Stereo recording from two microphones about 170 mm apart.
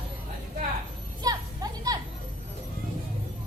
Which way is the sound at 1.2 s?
20° right (ahead or behind).